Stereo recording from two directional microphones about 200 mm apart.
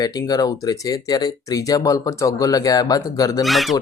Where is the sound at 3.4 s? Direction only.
Centre (ahead or behind).